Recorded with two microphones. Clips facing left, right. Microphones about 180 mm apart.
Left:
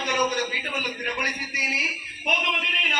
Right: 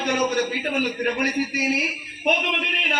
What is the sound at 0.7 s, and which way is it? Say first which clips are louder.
A man's voice: right 8 dB; 55° right (ahead or behind).